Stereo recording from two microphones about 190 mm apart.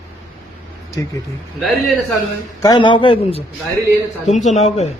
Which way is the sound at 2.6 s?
20° left (ahead or behind).